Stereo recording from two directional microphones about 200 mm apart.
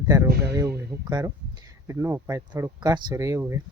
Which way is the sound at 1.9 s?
15° right (ahead or behind).